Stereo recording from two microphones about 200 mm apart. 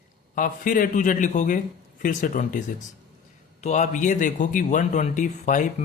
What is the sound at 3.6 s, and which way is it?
Speech, 35° left (ahead or behind).